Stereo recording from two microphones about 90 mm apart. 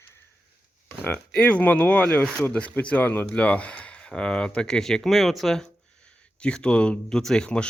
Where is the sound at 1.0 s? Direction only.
15° left (ahead or behind).